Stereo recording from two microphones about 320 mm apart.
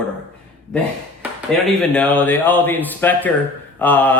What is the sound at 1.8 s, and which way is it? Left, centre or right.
A man's voice, centre.